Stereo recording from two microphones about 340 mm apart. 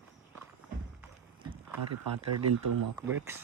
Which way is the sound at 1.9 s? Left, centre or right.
Right.